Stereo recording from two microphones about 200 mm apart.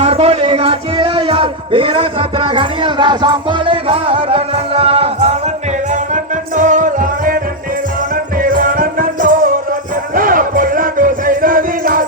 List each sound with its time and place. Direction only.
0.0 s speech: 30° right (ahead or behind)
6.6 s music: 40° right (ahead or behind)
8.4 s music: 45° right (ahead or behind)